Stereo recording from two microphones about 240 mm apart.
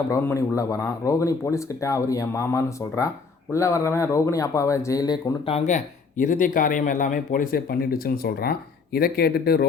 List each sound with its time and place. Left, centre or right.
0.1 s speech: centre; by 9.6 s left